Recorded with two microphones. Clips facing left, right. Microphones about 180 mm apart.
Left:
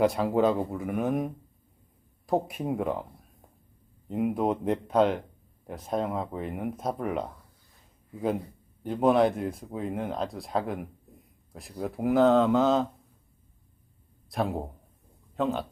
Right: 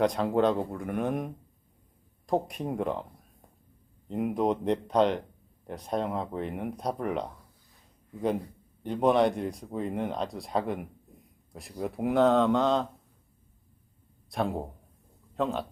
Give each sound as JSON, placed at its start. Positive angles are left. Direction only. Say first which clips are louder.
{"t": 0.0, "sound": "speech", "louder": "left 1 dB", "side_deg": 5}
{"t": 4.1, "sound": "speech", "louder": "left 1 dB", "side_deg": 0}
{"t": 14.3, "sound": "speech", "louder": "left 1 dB", "side_deg": 0}